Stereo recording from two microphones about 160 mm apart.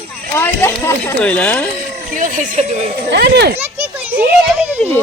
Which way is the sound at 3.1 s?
90° right.